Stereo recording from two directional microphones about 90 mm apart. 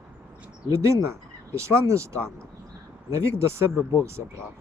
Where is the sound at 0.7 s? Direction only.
35° right (ahead or behind).